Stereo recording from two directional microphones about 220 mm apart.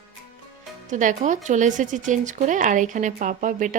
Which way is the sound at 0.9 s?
35° right (ahead or behind).